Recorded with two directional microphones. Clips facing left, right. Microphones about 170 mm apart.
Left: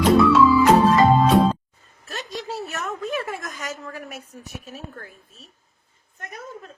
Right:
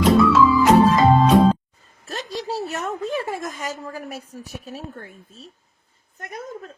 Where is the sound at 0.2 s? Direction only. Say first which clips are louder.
Even; centre (ahead or behind).